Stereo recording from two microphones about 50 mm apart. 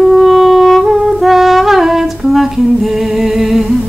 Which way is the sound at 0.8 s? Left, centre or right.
Centre.